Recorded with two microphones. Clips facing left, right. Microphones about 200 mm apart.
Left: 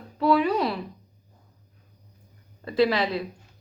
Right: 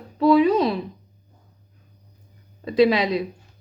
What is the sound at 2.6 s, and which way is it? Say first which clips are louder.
Speech: right 5 dB; 15° right (ahead or behind).